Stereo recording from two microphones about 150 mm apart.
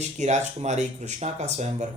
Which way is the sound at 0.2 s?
50° right (ahead or behind).